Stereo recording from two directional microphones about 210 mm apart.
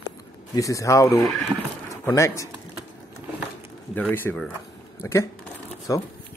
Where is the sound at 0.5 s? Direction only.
15° left (ahead or behind).